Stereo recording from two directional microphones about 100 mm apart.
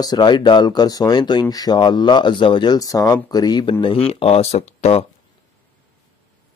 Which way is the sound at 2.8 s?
35° left (ahead or behind).